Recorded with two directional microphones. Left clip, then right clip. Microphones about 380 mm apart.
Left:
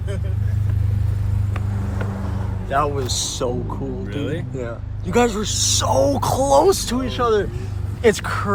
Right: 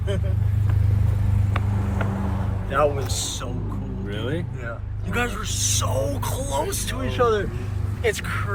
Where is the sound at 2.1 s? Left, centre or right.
Right.